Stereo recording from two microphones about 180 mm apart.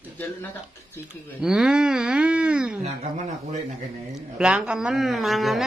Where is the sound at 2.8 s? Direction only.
40° right (ahead or behind).